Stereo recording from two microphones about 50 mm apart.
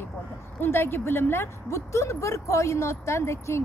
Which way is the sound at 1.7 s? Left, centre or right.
Left.